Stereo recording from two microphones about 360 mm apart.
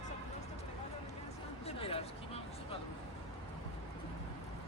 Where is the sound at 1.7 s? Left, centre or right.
Centre.